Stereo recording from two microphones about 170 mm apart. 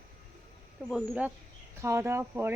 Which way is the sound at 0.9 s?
10° right (ahead or behind).